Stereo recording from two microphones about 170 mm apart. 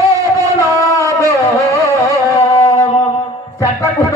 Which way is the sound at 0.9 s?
20° left (ahead or behind).